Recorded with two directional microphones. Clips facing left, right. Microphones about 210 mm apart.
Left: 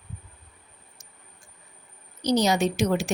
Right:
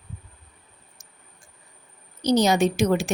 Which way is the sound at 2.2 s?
55° right (ahead or behind).